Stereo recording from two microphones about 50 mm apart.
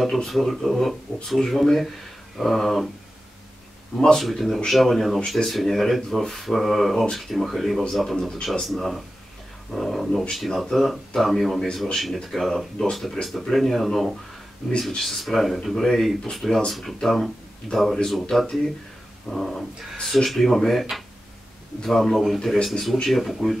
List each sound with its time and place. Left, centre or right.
0.3 s speech: centre
4.0 s speech: centre
21.8 s speech: centre